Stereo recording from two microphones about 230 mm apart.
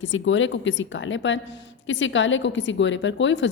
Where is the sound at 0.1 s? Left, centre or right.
Left.